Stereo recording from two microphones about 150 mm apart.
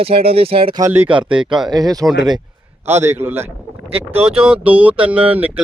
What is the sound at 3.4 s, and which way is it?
Speech, 40° right (ahead or behind).